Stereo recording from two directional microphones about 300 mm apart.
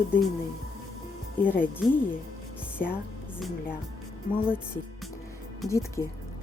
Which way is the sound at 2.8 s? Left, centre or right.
Left.